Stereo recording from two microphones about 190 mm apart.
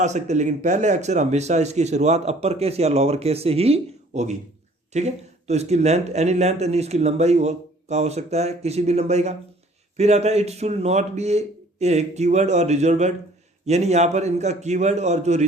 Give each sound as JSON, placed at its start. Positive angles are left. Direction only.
{"t": 0.0, "sound": "speech", "side_deg": -40}